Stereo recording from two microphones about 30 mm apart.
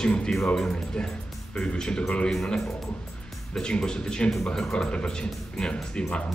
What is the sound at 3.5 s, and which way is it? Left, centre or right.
Speech, left.